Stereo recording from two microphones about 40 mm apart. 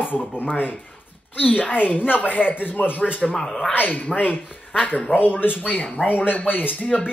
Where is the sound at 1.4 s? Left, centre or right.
Left.